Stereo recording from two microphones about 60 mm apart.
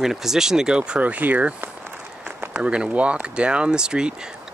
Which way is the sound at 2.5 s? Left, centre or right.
Centre.